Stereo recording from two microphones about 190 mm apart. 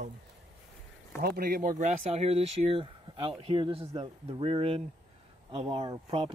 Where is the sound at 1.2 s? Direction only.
55° right (ahead or behind).